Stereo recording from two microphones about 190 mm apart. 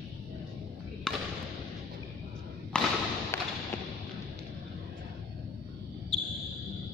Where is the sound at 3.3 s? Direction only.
15° left (ahead or behind).